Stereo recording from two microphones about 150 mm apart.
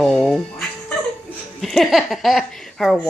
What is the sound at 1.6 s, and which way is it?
A woman's voice, centre (ahead or behind).